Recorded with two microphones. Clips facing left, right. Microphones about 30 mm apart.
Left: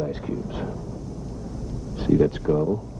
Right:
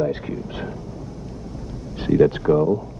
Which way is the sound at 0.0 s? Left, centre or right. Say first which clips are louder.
Right 4 dB; right.